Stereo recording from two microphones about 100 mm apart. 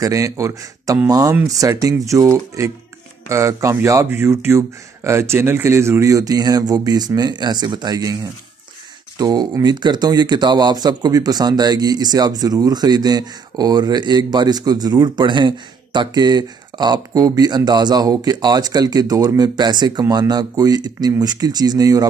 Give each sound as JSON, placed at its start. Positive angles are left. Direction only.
{"t": 0.0, "sound": "speech", "side_deg": -35}